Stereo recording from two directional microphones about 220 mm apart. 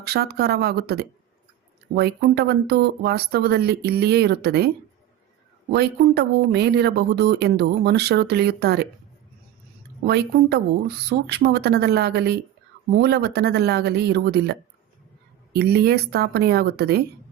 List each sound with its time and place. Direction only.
0.0 s speech: 45° right (ahead or behind)
5.7 s speech: 45° right (ahead or behind)
10.1 s speech: 50° right (ahead or behind)
15.5 s speech: 45° right (ahead or behind)